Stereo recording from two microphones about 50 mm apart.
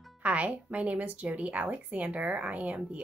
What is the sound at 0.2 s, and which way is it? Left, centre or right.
A woman's voice, right.